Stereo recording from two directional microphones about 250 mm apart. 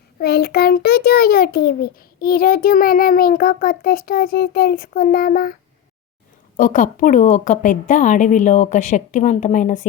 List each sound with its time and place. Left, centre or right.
0.2 s a child's voice: left
6.6 s a child's voice: left